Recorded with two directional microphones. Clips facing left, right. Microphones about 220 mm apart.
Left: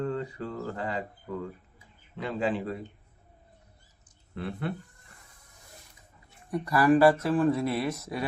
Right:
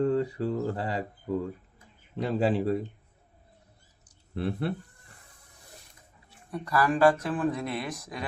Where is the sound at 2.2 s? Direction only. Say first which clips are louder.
Right 4 dB; 40° right (ahead or behind).